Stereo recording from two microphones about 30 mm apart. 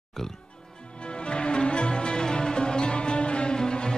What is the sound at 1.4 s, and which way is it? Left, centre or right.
Music, left.